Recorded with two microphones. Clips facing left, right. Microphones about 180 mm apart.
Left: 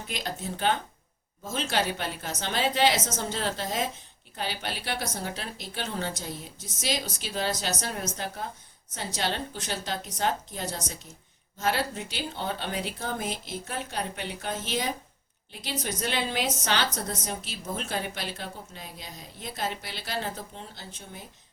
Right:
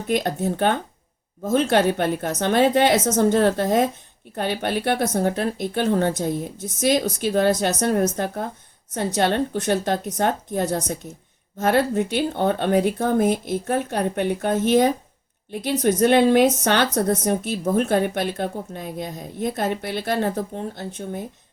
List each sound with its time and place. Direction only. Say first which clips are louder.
0.1 s a woman's voice: right 13 dB; 55° right (ahead or behind)